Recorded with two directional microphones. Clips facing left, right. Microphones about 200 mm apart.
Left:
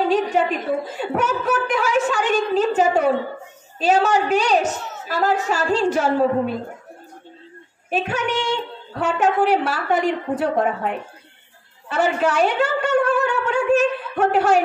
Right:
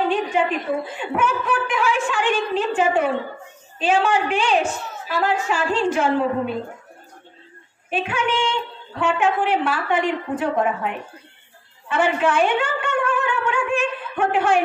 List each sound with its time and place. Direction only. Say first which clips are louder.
0.1 s a sound: left 2 dB; 40° left (ahead or behind)
0.9 s a woman's voice: left 1 dB; 40° left (ahead or behind)
7.9 s a woman's voice: left 1 dB; 40° left (ahead or behind)
11.9 s a woman's voice: even; 40° left (ahead or behind)